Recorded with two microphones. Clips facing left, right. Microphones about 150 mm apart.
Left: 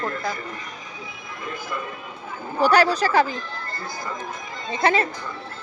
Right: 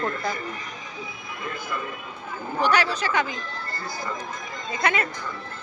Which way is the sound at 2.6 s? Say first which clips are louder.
Left 5 dB; 35° left (ahead or behind).